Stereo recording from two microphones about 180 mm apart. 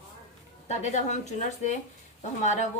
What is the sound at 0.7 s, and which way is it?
A woman's voice, 40° left (ahead or behind).